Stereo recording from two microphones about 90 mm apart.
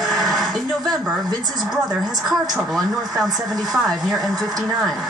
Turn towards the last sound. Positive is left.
turn(degrees=0)  # may be behind; listen again after turning